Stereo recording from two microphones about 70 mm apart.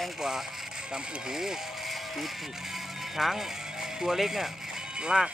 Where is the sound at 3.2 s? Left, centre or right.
Centre.